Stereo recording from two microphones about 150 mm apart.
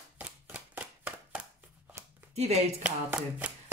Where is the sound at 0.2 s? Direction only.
10° right (ahead or behind).